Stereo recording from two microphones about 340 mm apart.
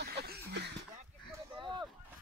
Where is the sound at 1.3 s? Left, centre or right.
Centre.